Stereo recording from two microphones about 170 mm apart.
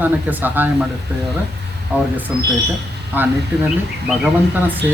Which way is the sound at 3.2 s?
10° right (ahead or behind).